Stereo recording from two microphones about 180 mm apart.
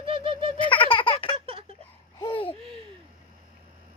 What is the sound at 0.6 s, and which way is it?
Baby laughter, 30° left (ahead or behind).